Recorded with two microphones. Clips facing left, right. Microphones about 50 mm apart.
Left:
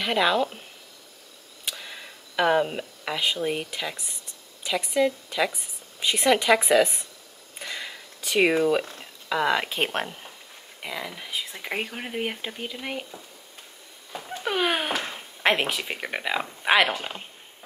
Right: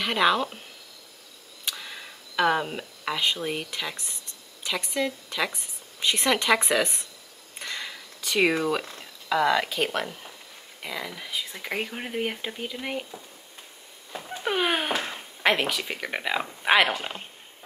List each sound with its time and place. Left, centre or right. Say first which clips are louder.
0.0 s speech: even; centre
1.7 s a sound: even; centre
3.4 s speech: left 2 dB; centre
7.5 s a sound: even; centre
8.2 s speech: left 2 dB; centre
9.5 s speech: even; left
10.8 s speech: even; centre
15.4 s speech: even; centre
16.1 s speech: even; centre